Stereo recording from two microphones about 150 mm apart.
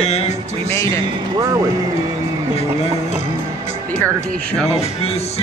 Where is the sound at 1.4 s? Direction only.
25° right (ahead or behind).